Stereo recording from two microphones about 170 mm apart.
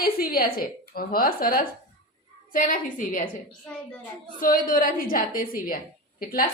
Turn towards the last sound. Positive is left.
turn(degrees=60)  # may be behind; listen again after turning